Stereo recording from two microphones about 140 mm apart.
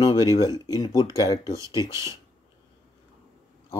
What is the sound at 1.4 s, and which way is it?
Speech, 20° right (ahead or behind).